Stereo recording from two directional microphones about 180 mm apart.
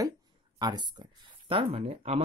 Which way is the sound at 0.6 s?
25° right (ahead or behind).